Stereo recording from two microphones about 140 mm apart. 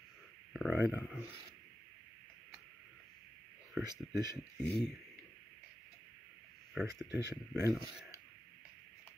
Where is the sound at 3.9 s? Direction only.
30° right (ahead or behind).